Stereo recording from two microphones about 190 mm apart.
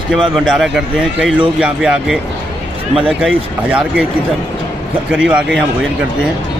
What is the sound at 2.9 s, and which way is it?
Speech, 30° right (ahead or behind).